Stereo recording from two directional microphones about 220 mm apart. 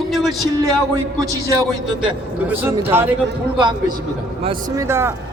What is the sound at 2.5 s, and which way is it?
A man's voice, 10° right (ahead or behind).